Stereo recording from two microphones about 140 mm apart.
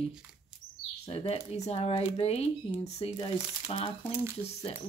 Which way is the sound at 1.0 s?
45° left (ahead or behind).